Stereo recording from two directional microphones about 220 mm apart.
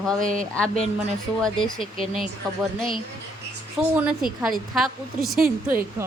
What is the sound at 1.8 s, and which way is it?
Speech, 25° left (ahead or behind).